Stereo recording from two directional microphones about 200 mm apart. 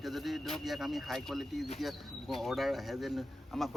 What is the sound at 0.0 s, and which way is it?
Speech, centre (ahead or behind).